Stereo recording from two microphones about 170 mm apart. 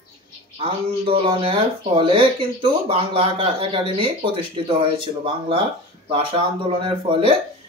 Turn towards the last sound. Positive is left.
turn(degrees=-30)  # may be behind; listen again after turning